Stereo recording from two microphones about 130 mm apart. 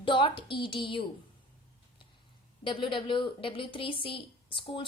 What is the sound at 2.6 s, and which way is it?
A woman's voice, 40° left (ahead or behind).